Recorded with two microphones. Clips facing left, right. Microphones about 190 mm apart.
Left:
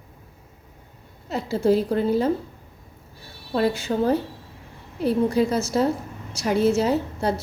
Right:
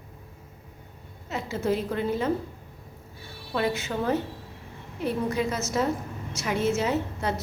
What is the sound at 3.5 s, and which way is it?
A woman's voice, 30° left (ahead or behind).